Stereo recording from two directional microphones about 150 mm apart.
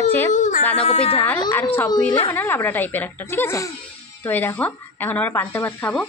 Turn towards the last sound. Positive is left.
turn(degrees=10)  # may be behind; listen again after turning